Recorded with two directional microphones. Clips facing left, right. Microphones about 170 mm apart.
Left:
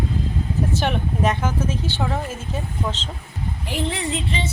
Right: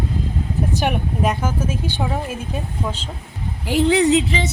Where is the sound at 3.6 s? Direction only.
80° right.